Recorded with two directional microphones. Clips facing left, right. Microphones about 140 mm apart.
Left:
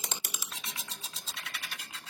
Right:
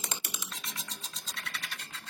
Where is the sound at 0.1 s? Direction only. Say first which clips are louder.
Right 1 dB; centre (ahead or behind).